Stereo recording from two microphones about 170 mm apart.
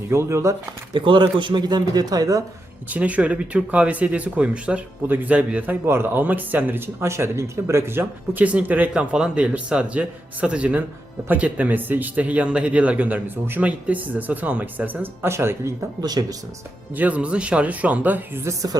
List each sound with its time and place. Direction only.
0.1 s speech: 15° right (ahead or behind)
0.9 s speech: 30° right (ahead or behind)
2.9 s speech: 10° right (ahead or behind)
16.9 s speech: 10° right (ahead or behind)